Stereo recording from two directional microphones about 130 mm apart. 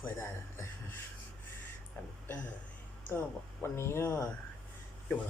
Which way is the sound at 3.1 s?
15° left (ahead or behind).